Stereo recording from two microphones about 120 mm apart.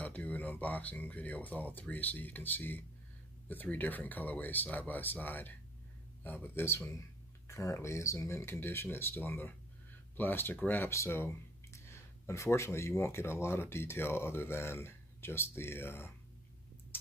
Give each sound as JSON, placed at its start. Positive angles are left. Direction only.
{"t": 0.0, "sound": "speech", "side_deg": 15}